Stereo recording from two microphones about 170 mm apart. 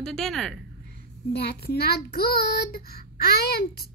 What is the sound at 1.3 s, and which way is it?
Child singing, 75° left (ahead or behind).